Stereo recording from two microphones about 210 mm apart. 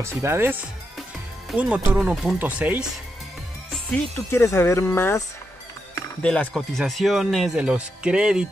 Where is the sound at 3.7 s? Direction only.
10° left (ahead or behind).